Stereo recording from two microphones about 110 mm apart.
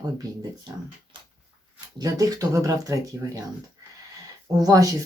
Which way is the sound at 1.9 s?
35° right (ahead or behind).